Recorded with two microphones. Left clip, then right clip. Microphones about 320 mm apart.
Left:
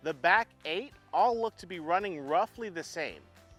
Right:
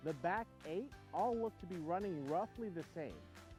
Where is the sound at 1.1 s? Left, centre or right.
Centre.